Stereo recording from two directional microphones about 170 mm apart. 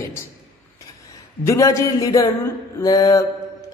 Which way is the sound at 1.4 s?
20° left (ahead or behind).